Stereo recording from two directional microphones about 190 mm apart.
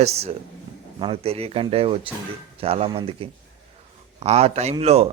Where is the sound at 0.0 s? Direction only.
35° right (ahead or behind).